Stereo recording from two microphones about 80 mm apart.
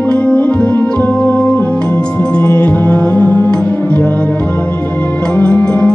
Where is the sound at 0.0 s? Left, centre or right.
Centre.